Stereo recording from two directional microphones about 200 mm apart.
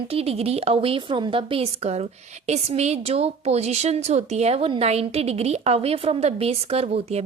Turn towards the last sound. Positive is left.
turn(degrees=-30)  # may be behind; listen again after turning